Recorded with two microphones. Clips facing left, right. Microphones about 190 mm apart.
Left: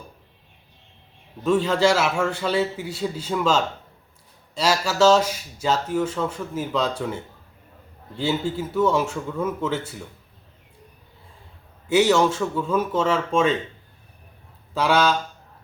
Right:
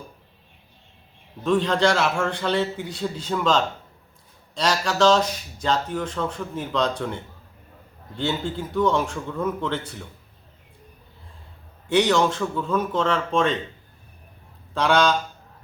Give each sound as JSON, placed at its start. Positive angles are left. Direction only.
{"t": 1.5, "sound": "speech", "side_deg": 5}
{"t": 11.9, "sound": "speech", "side_deg": 5}
{"t": 14.7, "sound": "speech", "side_deg": 5}